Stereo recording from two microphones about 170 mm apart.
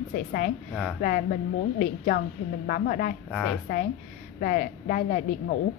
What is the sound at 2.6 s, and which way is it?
Speech, 55° left (ahead or behind).